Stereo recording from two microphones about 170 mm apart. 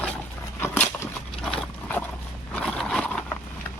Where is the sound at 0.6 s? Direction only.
10° left (ahead or behind).